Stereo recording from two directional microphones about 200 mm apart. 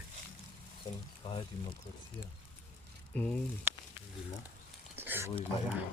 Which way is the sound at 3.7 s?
10° right (ahead or behind).